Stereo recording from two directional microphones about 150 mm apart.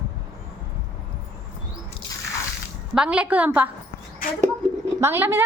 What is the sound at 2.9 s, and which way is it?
Speech, 5° right (ahead or behind).